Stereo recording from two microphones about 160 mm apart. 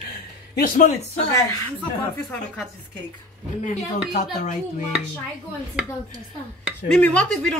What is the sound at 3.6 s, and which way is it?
Speech, 50° left (ahead or behind).